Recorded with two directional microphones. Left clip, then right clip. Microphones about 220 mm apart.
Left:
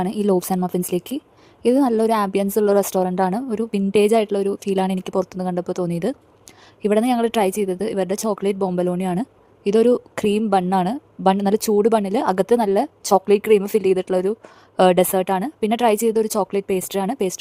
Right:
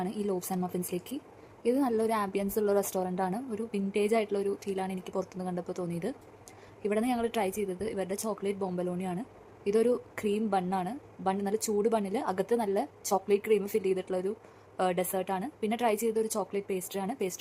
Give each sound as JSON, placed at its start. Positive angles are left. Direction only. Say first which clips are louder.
{"t": 0.0, "sound": "a woman's voice", "louder": "left 13 dB", "side_deg": 45}